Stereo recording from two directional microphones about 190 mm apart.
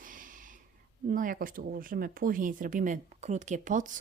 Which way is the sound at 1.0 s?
45° right (ahead or behind).